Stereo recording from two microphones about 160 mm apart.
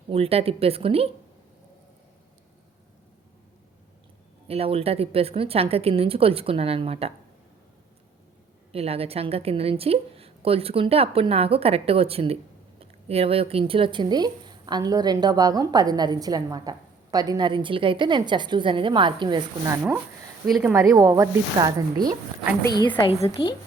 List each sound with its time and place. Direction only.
0.1 s a woman's voice: 40° right (ahead or behind)
4.4 s a woman's voice: 35° right (ahead or behind)
8.7 s a woman's voice: 40° right (ahead or behind)
19.6 s a woman's voice: 15° right (ahead or behind)
23.0 s a woman's voice: 35° left (ahead or behind)